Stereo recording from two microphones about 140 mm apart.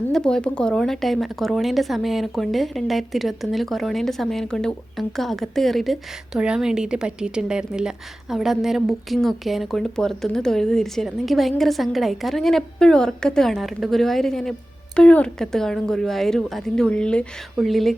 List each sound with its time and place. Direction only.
0.1 s a woman's voice: 5° left (ahead or behind)